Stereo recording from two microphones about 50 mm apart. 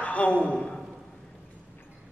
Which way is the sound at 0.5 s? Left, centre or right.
Centre.